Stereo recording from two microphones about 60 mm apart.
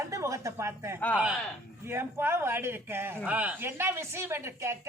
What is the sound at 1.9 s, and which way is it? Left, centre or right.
A man's voice, right.